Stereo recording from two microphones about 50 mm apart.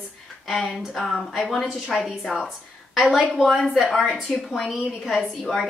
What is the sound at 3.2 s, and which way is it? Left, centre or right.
A woman's voice, centre.